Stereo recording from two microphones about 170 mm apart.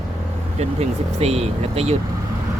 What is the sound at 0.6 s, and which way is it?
Speech, 40° right (ahead or behind).